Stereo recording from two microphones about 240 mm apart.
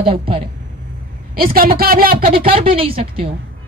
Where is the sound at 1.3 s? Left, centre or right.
Right.